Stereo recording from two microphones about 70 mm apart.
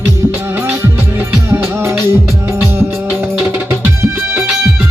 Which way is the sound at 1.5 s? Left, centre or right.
Right.